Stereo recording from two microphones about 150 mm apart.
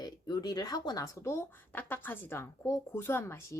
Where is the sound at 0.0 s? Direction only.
30° left (ahead or behind).